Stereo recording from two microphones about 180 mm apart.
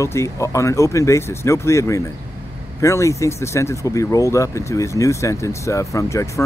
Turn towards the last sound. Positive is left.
turn(degrees=15)  # may be behind; listen again after turning